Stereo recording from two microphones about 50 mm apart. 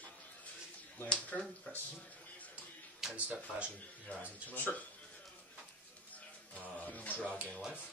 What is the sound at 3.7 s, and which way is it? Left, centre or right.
Speech, left.